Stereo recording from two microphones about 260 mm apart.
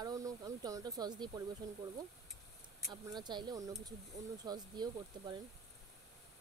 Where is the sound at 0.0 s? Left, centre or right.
Centre.